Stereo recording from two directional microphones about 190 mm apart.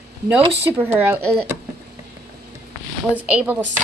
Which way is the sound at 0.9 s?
10° right (ahead or behind).